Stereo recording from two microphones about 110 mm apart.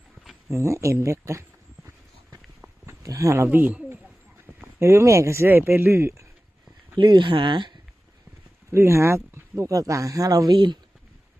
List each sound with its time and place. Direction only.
0.4 s speech: 25° right (ahead or behind)
2.8 s speech: 30° right (ahead or behind)
6.9 s speech: 45° right (ahead or behind)
8.7 s speech: 25° right (ahead or behind); by 10.8 s 40° right (ahead or behind)